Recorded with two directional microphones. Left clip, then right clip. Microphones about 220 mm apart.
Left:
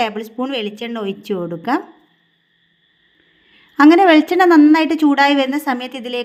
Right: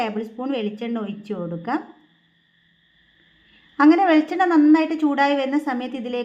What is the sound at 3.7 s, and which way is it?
A woman's voice, 40° left (ahead or behind).